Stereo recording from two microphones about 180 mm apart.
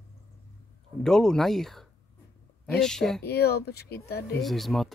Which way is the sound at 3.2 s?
60° left (ahead or behind).